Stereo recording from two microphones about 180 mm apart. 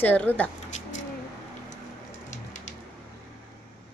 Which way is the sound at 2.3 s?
45° left (ahead or behind).